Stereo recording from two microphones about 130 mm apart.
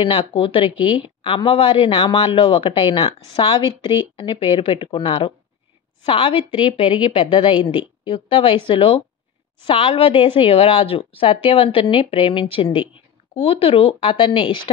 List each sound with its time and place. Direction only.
0.0 s a woman's voice: 45° left (ahead or behind)